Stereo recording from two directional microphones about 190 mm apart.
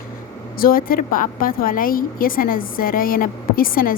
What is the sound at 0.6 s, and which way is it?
A woman's voice, 50° left (ahead or behind).